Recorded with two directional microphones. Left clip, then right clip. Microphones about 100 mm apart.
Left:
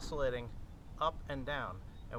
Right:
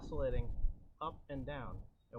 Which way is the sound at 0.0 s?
10° left (ahead or behind).